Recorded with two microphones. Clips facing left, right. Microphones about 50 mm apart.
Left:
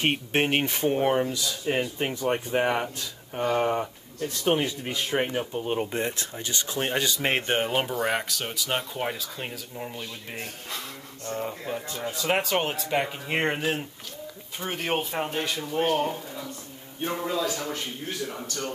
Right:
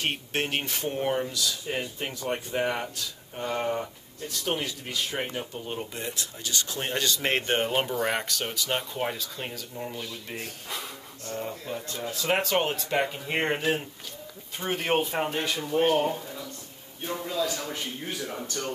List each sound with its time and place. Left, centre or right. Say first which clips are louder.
0.0 s speech: left 5 dB; left; by 10.0 s centre
11.4 s speech: left 2 dB; centre
17.0 s a man's voice: left 4 dB; left
17.4 s speech: left 1 dB; centre